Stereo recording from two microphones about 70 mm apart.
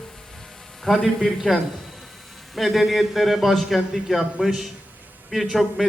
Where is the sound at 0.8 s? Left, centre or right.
Centre.